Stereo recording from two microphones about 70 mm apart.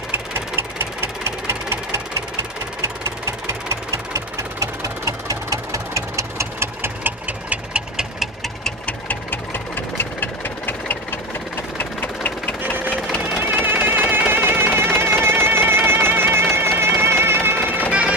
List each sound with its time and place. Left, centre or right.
0.1 s engine: right
3.6 s engine: right; by 8.3 s centre
8.8 s music: left
12.3 s a sound: centre
13.4 s music: right